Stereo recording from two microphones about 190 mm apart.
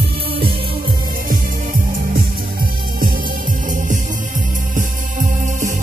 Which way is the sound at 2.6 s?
50° right (ahead or behind).